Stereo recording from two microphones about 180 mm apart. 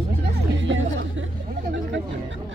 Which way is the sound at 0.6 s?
90° right.